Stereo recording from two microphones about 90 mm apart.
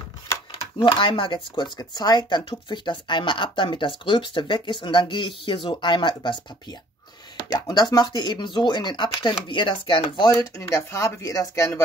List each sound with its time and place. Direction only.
0.5 s speech: 80° left; by 6.3 s 60° left (ahead or behind)
7.5 s speech: 50° left (ahead or behind); by 10.2 s 70° left (ahead or behind)
10.6 s speech: 35° left (ahead or behind)